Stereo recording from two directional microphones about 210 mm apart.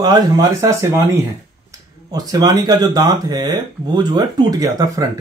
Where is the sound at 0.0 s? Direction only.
15° right (ahead or behind).